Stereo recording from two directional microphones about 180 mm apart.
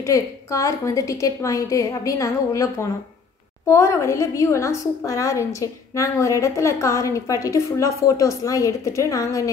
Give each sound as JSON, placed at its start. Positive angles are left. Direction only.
{"t": 0.0, "sound": "a woman's voice", "side_deg": 15}